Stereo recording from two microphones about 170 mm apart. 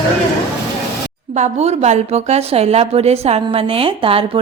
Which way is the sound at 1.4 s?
40° right (ahead or behind).